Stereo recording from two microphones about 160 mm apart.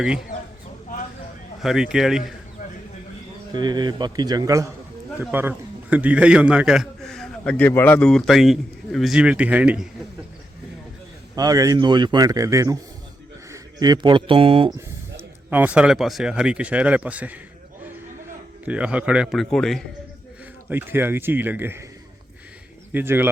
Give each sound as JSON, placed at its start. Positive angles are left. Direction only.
{"t": 1.6, "sound": "a man's voice", "side_deg": -5}
{"t": 3.5, "sound": "a man's voice", "side_deg": -25}
{"t": 11.3, "sound": "a man's voice", "side_deg": -25}
{"t": 14.8, "sound": "speech", "side_deg": -15}
{"t": 18.6, "sound": "a man's voice", "side_deg": -5}
{"t": 20.7, "sound": "speech", "side_deg": -15}
{"t": 22.9, "sound": "speech", "side_deg": -10}